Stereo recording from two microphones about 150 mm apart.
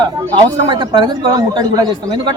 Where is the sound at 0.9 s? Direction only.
30° right (ahead or behind).